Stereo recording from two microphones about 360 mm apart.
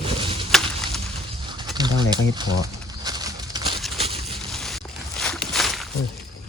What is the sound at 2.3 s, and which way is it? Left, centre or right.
Speech, centre.